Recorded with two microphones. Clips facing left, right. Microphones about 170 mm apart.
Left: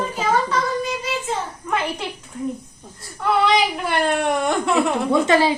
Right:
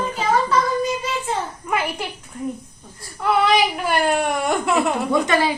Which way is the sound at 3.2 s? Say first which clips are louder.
Even; 5° right (ahead or behind).